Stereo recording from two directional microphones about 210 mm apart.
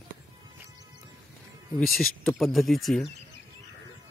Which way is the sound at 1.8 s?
5° left (ahead or behind).